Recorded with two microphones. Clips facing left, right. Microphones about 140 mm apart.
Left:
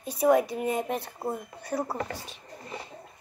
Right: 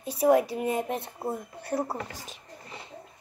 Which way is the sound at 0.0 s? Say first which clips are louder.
Even; 30° right (ahead or behind).